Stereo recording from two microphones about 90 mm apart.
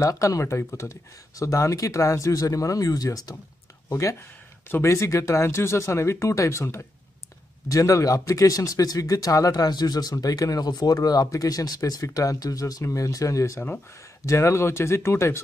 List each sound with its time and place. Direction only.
0.0 s speech: 35° left (ahead or behind)